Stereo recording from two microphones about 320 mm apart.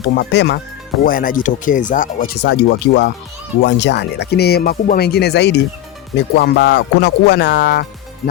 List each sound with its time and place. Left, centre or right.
0.2 s speech: left